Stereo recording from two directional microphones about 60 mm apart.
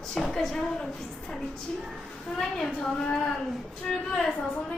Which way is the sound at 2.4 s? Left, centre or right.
Centre.